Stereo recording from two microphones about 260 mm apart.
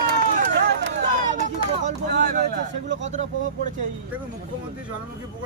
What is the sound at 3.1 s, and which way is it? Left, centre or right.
Vehicle, right.